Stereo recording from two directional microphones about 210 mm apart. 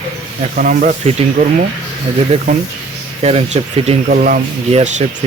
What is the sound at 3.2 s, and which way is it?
Speech, 30° right (ahead or behind).